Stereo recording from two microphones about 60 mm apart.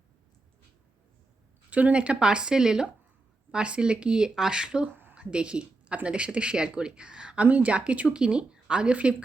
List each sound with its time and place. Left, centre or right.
1.7 s speech: right
4.9 s a sound: right
5.1 s speech: centre